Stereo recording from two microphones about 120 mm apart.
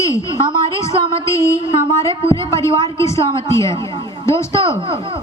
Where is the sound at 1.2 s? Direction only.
25° left (ahead or behind).